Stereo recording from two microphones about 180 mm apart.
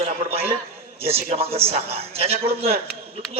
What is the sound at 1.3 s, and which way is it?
Speech, 35° right (ahead or behind).